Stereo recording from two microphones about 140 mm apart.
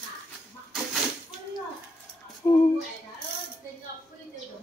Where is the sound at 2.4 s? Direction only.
20° left (ahead or behind).